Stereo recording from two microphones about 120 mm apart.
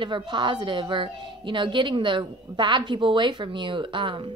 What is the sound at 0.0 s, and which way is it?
A woman's voice, 40° right (ahead or behind).